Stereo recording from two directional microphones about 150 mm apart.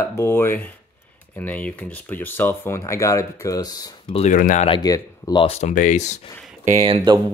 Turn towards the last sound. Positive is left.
turn(degrees=-50)  # may be behind; listen again after turning